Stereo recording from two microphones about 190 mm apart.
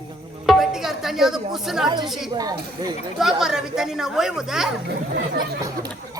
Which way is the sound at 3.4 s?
Centre (ahead or behind).